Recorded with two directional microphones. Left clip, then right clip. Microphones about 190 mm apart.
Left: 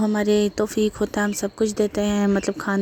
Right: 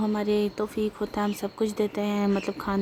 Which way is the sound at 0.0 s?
35° left (ahead or behind).